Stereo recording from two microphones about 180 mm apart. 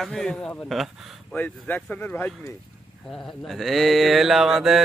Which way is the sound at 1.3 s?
10° left (ahead or behind).